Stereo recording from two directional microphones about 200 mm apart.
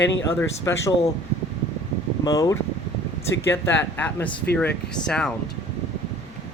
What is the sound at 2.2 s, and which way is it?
Speech, 20° left (ahead or behind).